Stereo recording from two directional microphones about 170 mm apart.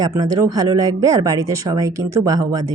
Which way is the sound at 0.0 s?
20° right (ahead or behind).